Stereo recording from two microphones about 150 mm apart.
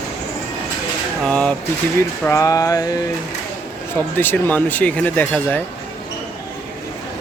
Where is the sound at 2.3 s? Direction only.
20° left (ahead or behind).